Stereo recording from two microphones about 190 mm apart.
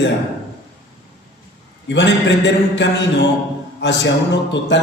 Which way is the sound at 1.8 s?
65° left (ahead or behind).